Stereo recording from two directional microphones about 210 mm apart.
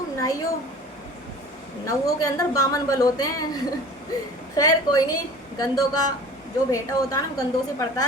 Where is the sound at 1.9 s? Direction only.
15° left (ahead or behind).